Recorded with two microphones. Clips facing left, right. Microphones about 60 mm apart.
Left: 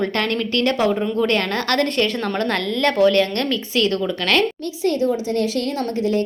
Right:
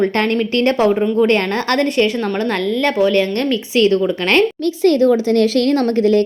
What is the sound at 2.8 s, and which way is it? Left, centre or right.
Speech, centre.